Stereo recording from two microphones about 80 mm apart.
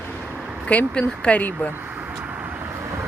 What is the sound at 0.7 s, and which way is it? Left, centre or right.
Speech, centre.